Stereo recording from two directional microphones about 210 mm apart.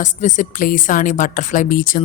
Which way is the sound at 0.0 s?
35° left (ahead or behind).